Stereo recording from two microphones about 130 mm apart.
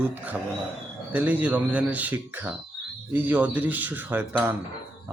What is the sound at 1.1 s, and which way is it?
Speech, 15° right (ahead or behind).